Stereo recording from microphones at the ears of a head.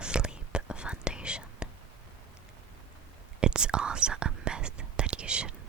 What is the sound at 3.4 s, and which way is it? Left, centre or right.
Whispering, right.